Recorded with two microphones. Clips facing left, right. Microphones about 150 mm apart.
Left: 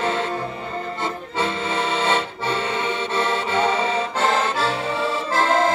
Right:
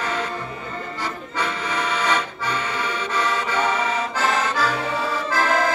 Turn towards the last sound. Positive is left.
turn(degrees=25)  # may be behind; listen again after turning